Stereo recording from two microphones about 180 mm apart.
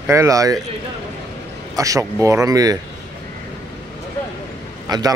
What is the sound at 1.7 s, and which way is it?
Speech, 20° right (ahead or behind).